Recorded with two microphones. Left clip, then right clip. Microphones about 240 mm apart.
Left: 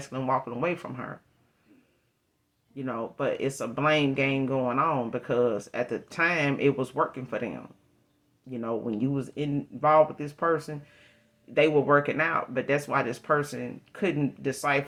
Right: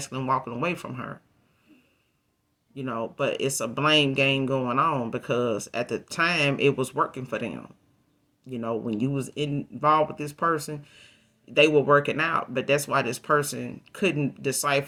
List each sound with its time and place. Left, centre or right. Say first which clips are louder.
0.0 s speech: right 1 dB; right
2.7 s speech: right 2 dB; right
8.6 s speech: right 1 dB; right